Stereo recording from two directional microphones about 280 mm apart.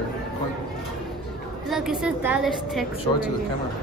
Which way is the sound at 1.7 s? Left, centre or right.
Centre.